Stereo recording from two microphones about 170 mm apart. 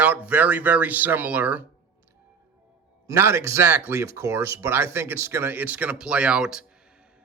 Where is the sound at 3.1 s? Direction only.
15° right (ahead or behind).